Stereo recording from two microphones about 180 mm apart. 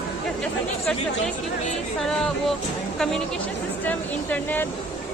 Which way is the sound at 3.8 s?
10° left (ahead or behind).